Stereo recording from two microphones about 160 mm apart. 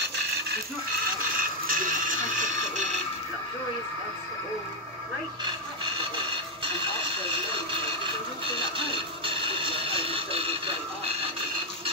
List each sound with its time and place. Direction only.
1.7 s television: 55° right (ahead or behind)
8.7 s music: 35° right (ahead or behind)